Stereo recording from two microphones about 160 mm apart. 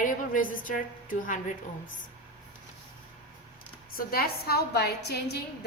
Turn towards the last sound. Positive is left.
turn(degrees=90)